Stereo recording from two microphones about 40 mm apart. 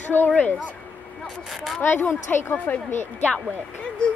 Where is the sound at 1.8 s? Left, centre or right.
Left.